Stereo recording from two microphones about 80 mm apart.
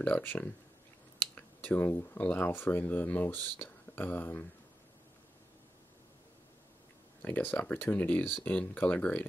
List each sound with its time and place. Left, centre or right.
0.0 s speech: left
7.2 s speech: left